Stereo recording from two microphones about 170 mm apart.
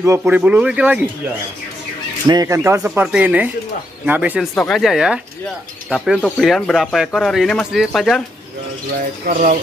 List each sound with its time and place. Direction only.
0.0 s speech: 15° right (ahead or behind)
2.2 s speech: 20° right (ahead or behind)
4.6 s speech: 5° left (ahead or behind)
9.3 s speech: 50° right (ahead or behind)